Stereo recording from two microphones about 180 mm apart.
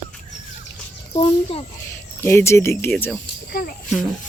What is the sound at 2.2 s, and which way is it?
Speech, 15° left (ahead or behind).